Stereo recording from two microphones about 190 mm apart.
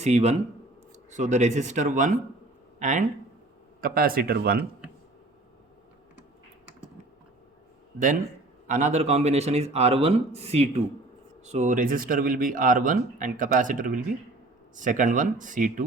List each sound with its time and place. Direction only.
0.0 s a man's voice: 35° right (ahead or behind); by 4.6 s 50° right (ahead or behind)
7.9 s a man's voice: 45° right (ahead or behind)